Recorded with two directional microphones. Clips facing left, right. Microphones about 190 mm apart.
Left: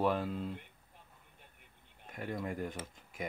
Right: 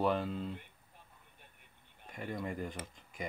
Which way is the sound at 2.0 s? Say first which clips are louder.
Left 1 dB; centre (ahead or behind).